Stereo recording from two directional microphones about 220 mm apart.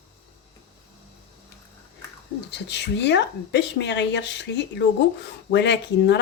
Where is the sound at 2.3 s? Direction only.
50° left (ahead or behind).